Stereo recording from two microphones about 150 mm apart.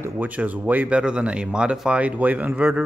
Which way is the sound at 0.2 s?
10° right (ahead or behind).